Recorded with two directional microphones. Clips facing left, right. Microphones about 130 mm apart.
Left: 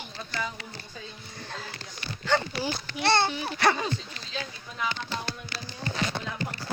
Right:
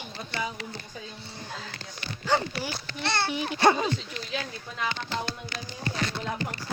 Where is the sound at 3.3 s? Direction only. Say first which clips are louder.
Right 3 dB; 15° right (ahead or behind).